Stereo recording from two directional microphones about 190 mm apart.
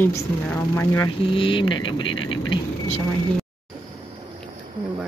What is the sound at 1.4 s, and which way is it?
Speech, 25° left (ahead or behind).